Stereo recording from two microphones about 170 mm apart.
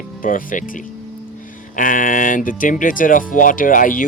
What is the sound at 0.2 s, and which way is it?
Speech, 55° left (ahead or behind).